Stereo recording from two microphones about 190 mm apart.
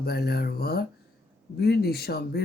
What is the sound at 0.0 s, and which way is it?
Speech, 55° left (ahead or behind).